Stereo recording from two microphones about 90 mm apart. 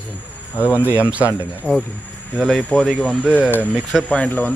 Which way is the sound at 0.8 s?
15° right (ahead or behind).